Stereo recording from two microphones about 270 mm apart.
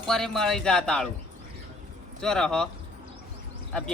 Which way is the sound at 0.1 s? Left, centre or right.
Centre.